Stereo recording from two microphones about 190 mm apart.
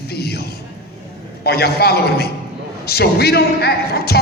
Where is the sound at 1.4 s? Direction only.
55° left (ahead or behind).